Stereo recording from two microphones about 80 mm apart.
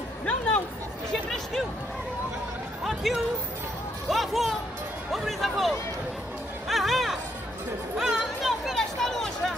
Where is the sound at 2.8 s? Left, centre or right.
Centre.